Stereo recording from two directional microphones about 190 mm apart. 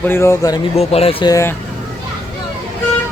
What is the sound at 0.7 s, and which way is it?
Speech, 30° left (ahead or behind).